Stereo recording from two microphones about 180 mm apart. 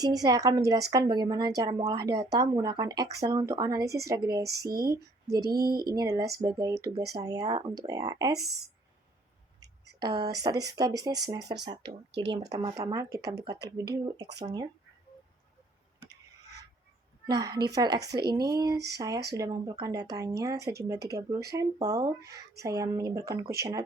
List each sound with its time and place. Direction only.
0.0 s a woman's voice: 20° right (ahead or behind)
5.4 s a sound: 60° right (ahead or behind)
5.9 s a woman's voice: 20° right (ahead or behind)
9.6 s a woman's voice: 20° right (ahead or behind)
17.2 s a woman's voice: 20° right (ahead or behind)